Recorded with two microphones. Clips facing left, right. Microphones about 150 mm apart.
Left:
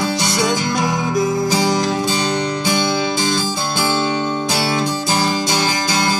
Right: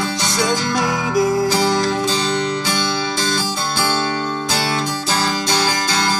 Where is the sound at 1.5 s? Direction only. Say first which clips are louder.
Even; 15° left (ahead or behind).